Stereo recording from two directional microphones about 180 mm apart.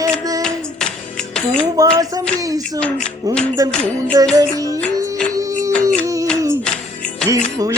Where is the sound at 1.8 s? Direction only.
20° right (ahead or behind).